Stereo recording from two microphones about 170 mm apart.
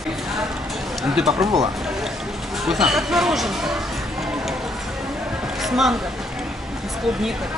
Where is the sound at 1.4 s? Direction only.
20° right (ahead or behind).